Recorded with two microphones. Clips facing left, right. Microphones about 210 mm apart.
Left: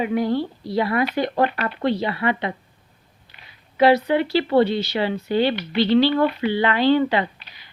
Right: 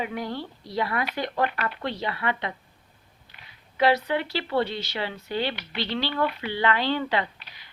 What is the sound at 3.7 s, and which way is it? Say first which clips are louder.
Speech: left 6 dB; 15° left (ahead or behind).